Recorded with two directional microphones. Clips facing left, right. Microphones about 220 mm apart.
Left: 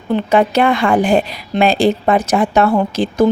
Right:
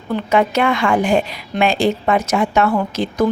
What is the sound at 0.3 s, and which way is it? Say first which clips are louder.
Speech: left 2 dB; 35° left (ahead or behind).